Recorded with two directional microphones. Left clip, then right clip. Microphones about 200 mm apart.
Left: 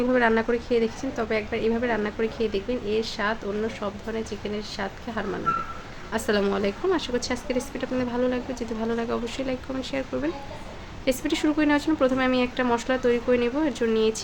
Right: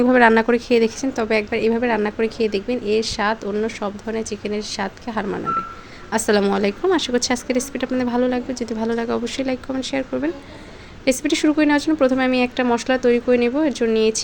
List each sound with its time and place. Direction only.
0.0 s a woman's voice: 40° right (ahead or behind)